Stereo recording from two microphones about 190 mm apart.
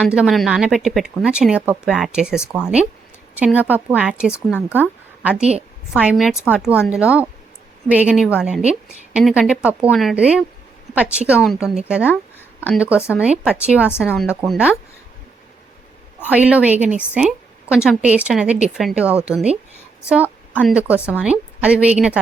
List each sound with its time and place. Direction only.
0.0 s a woman's voice: 5° right (ahead or behind)
5.4 s a woman's voice: 35° right (ahead or behind)
5.9 s a woman's voice: 5° right (ahead or behind)
16.2 s a woman's voice: 5° right (ahead or behind)
17.2 s a sound: 5° right (ahead or behind)
17.8 s a woman's voice: 5° right (ahead or behind)